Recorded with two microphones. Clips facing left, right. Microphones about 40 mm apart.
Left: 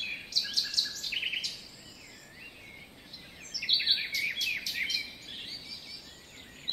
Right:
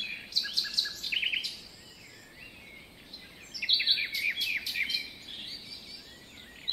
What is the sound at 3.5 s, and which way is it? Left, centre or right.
Bird vocalization, centre.